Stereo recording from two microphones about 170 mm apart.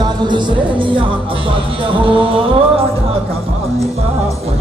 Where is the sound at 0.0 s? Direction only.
25° right (ahead or behind).